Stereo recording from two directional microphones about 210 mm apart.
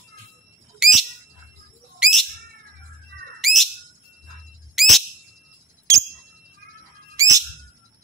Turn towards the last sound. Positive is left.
turn(degrees=-15)  # may be behind; listen again after turning